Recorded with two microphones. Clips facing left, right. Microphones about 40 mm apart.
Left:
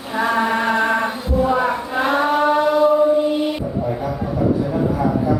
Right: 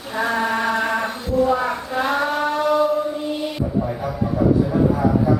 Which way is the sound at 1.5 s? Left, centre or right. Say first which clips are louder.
Left 2 dB; centre.